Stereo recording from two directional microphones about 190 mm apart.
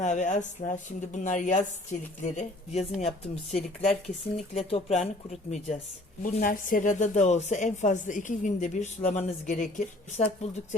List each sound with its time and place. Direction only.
0.0 s speech: 40° left (ahead or behind)
6.2 s speech: 45° left (ahead or behind)